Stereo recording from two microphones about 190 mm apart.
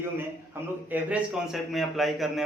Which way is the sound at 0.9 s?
5° right (ahead or behind).